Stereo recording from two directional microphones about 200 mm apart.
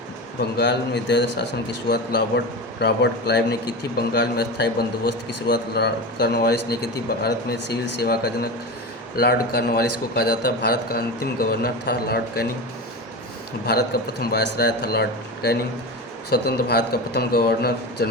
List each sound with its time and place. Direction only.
0.5 s a man's voice: 55° left (ahead or behind)
2.8 s a man's voice: 55° left (ahead or behind)
13.7 s a man's voice: 50° left (ahead or behind)